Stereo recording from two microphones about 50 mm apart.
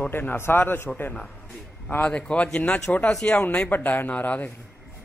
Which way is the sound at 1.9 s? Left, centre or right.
Left.